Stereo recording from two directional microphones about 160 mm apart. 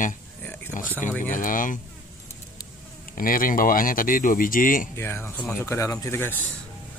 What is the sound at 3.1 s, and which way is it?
Speech, 60° left (ahead or behind).